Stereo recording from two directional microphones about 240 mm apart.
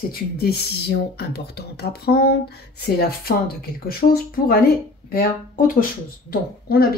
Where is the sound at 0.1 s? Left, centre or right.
Left.